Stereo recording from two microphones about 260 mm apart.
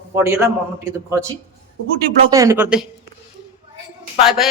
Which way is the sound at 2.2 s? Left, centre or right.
Centre.